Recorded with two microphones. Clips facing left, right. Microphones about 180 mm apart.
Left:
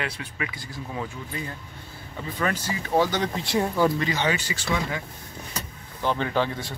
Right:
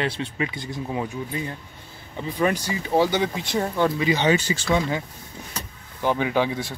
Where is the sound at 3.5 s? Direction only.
5° left (ahead or behind).